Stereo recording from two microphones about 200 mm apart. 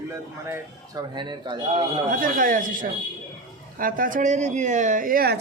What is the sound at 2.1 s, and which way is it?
A woman's voice, 45° right (ahead or behind).